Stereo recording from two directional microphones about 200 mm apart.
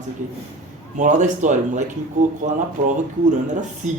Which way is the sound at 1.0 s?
40° right (ahead or behind).